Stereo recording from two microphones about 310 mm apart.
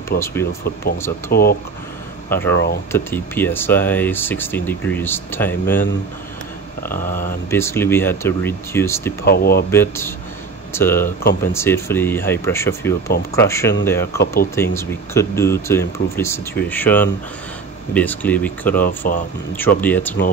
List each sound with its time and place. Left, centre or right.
0.2 s speech: centre
1.3 s speech: left
2.2 s speech: centre
2.5 s speech: left
2.9 s speech: centre
6.9 s a sound: left
7.5 s speech: centre
9.2 s speech: left
9.7 s speech: centre
14.2 s a sound: left
14.5 s speech: centre
18.9 s a sound: left
19.8 s speech: centre